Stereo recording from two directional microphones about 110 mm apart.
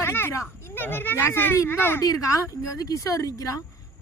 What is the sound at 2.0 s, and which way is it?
A woman's voice, 30° left (ahead or behind).